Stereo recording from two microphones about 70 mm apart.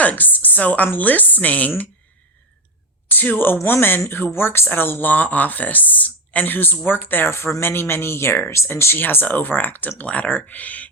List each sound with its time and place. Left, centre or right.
0.0 s a woman's voice: left
3.1 s speech: left